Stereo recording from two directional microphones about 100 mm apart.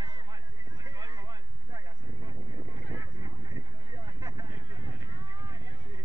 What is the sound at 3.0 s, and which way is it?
Vehicle, 45° right (ahead or behind).